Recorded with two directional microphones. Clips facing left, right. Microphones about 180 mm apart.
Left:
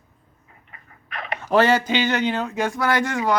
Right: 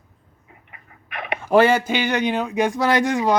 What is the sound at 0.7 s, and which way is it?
Speech, 15° right (ahead or behind).